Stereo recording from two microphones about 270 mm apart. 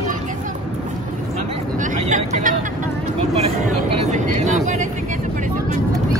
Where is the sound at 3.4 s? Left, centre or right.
Right.